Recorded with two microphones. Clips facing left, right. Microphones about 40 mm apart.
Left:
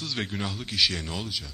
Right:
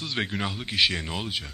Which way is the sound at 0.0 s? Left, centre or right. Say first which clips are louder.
Right 2 dB; right.